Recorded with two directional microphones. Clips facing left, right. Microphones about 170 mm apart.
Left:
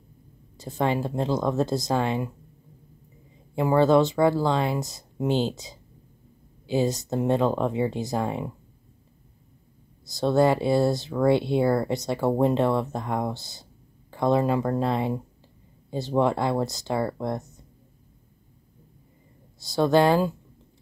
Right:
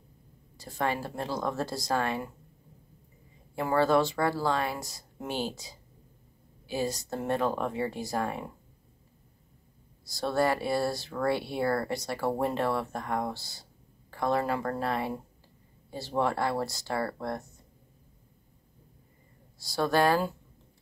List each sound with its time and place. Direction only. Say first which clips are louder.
0.6 s speech: left 6 dB; 20° left (ahead or behind)
3.5 s speech: left 6 dB; 20° left (ahead or behind)
10.0 s speech: left 7 dB; 20° left (ahead or behind)
19.6 s speech: left 6 dB; 20° left (ahead or behind)